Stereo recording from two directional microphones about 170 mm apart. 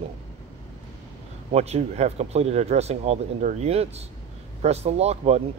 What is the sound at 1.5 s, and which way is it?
Speech, 40° right (ahead or behind).